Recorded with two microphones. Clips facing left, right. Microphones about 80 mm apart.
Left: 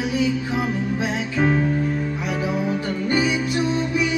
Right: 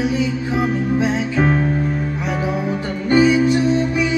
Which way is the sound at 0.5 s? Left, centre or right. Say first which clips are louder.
Right 5 dB; right.